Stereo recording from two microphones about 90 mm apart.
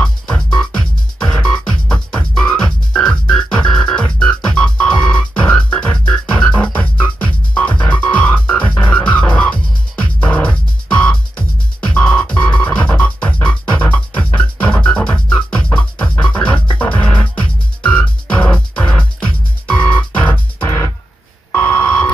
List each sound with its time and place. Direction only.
0.0 s music: 10° left (ahead or behind)
20.5 s music: 30° left (ahead or behind)